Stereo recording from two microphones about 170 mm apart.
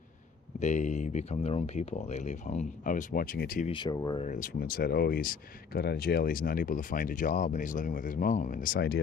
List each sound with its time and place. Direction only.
0.6 s speech: 45° left (ahead or behind)
3.6 s speech: 25° left (ahead or behind)
4.2 s speech: 45° left (ahead or behind)
4.6 s speech: 60° left (ahead or behind)